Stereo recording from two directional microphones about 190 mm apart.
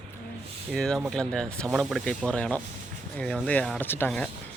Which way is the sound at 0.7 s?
5° left (ahead or behind).